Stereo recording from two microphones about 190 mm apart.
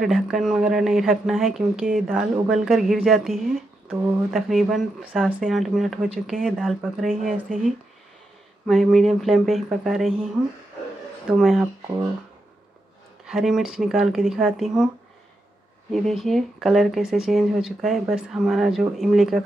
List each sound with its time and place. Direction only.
0.0 s speech: centre (ahead or behind)
7.4 s speech: 45° right (ahead or behind)
8.6 s speech: centre (ahead or behind)
11.3 s speech: centre (ahead or behind)
13.2 s speech: centre (ahead or behind)
15.9 s speech: centre (ahead or behind)